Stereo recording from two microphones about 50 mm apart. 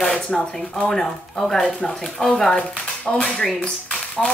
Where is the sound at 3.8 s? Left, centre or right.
Left.